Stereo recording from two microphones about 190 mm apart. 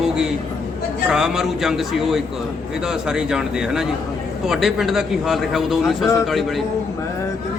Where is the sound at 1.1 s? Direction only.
5° right (ahead or behind).